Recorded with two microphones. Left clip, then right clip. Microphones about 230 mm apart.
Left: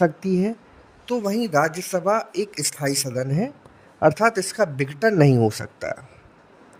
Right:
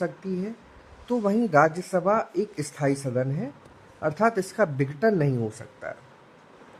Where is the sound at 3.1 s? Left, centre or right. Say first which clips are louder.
Left 3 dB; left.